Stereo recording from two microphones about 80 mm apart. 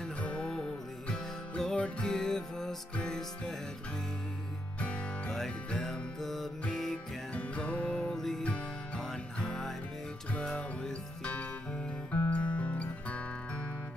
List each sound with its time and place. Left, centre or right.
0.2 s music: centre
4.7 s music: centre
5.3 s music: centre
7.3 s music: centre